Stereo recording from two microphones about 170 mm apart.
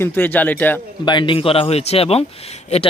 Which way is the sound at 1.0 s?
25° left (ahead or behind).